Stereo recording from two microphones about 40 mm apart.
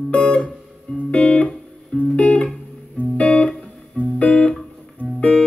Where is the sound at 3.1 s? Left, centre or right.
Left.